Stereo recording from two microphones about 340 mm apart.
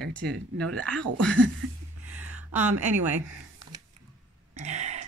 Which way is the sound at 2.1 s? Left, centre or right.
Centre.